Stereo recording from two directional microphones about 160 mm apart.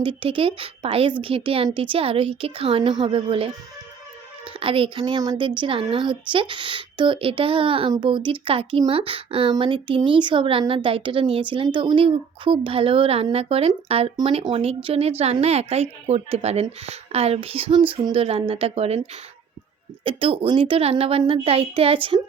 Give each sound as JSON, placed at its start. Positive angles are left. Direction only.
{"t": 0.0, "sound": "a woman's voice", "side_deg": -30}
{"t": 20.1, "sound": "a woman's voice", "side_deg": -35}